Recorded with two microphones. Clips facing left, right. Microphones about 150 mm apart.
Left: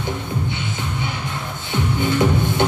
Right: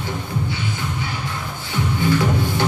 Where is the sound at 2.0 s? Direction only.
20° left (ahead or behind).